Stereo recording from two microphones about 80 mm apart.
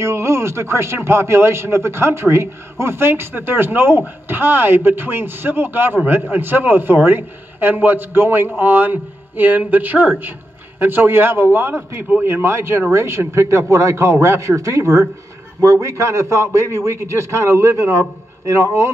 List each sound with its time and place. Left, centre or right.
0.0 s a man's voice: right